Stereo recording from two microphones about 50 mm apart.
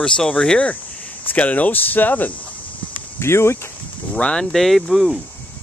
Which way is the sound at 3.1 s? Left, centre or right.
Left.